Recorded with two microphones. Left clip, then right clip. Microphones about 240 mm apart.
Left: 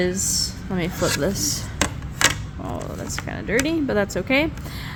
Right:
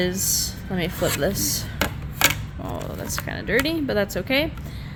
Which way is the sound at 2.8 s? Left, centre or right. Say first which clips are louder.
Even; centre.